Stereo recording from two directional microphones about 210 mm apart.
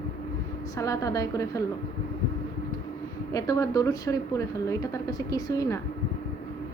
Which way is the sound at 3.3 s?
15° left (ahead or behind).